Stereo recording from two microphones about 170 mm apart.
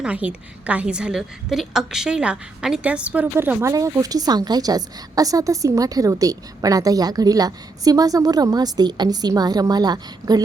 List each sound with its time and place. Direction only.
0.0 s a woman's voice: 10° right (ahead or behind); by 10.4 s 25° right (ahead or behind)